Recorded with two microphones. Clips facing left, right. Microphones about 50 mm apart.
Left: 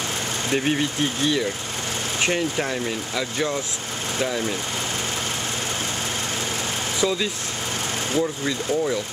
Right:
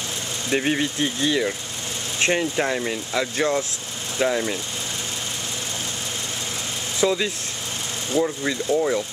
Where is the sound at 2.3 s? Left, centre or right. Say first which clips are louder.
Right 4 dB; centre.